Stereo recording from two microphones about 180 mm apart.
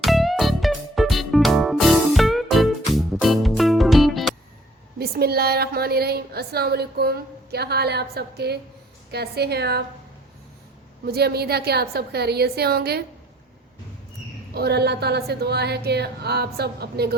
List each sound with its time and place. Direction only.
0.0 s music: centre (ahead or behind)
4.9 s a woman's voice: 60° right (ahead or behind)
11.0 s a woman's voice: 60° right (ahead or behind)
14.5 s a woman's voice: 65° right (ahead or behind)